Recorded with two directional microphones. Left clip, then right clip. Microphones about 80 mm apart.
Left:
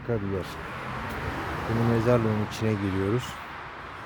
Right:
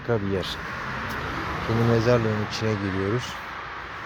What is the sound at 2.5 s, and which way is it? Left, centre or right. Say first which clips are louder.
Speech: right 2 dB; left.